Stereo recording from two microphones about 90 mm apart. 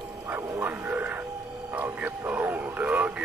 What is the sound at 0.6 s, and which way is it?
Speech, 20° right (ahead or behind).